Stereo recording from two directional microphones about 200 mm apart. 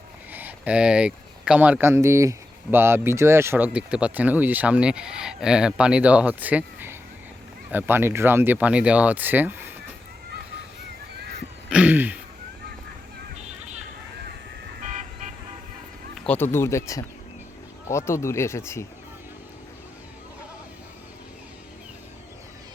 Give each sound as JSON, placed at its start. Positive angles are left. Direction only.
{"t": 0.3, "sound": "speech", "side_deg": -10}
{"t": 11.7, "sound": "speech", "side_deg": -5}
{"t": 13.4, "sound": "a sound", "side_deg": -35}
{"t": 16.1, "sound": "speech", "side_deg": 5}